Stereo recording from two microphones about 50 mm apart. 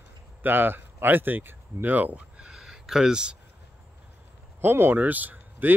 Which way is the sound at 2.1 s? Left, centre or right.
Right.